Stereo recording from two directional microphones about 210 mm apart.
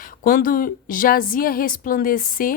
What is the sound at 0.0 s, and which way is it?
A woman's voice, 40° left (ahead or behind).